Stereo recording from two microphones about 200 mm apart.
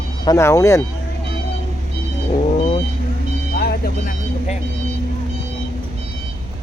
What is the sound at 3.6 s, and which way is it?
Vehicle, 50° left (ahead or behind).